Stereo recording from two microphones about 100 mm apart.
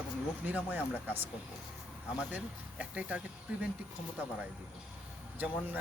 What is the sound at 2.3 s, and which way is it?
Speech, 15° right (ahead or behind).